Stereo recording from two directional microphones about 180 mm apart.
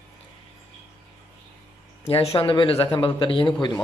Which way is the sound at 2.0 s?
30° left (ahead or behind).